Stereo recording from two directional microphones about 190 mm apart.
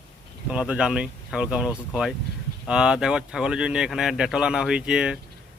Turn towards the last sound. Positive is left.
turn(degrees=-5)  # may be behind; listen again after turning